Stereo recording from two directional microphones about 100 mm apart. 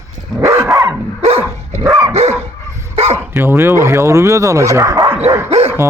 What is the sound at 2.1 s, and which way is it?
Dog, 90° right.